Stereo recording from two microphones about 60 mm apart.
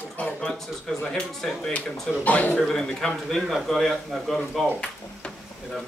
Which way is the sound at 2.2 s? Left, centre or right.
Left.